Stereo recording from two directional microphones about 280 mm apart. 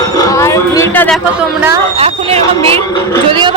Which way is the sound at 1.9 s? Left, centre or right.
Centre.